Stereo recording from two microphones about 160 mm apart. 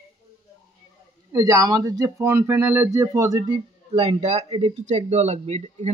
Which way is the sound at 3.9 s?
40° right (ahead or behind).